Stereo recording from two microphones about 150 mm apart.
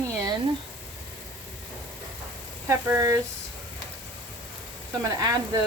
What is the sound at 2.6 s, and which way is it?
Speech, 15° right (ahead or behind).